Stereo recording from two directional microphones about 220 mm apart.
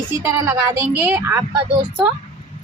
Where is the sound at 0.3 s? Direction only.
15° right (ahead or behind).